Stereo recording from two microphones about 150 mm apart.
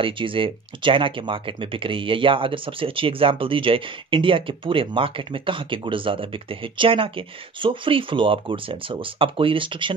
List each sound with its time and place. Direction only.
0.0 s speech: 35° right (ahead or behind)